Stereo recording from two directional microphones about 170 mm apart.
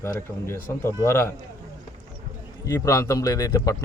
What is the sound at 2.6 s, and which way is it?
A man's voice, 20° left (ahead or behind).